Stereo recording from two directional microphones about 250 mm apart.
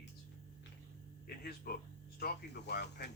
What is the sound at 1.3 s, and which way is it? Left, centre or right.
Speech, left.